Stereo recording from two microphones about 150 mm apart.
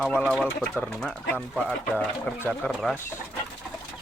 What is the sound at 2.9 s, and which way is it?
Speech, 15° left (ahead or behind).